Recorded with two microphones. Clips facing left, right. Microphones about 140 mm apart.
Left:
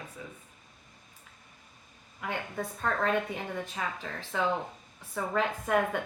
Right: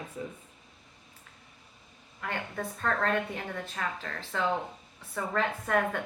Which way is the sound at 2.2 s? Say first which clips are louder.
Even; 10° left (ahead or behind).